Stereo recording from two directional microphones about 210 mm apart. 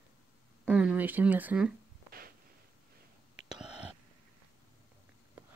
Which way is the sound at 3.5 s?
5° right (ahead or behind).